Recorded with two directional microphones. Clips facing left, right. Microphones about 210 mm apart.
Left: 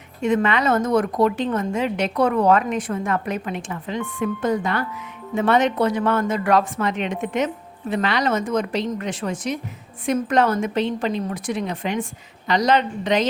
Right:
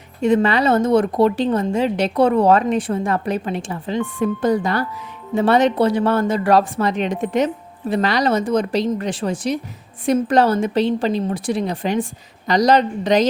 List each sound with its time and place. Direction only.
0.2 s speech: 35° right (ahead or behind)